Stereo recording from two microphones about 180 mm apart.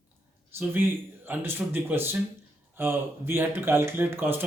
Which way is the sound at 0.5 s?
10° right (ahead or behind).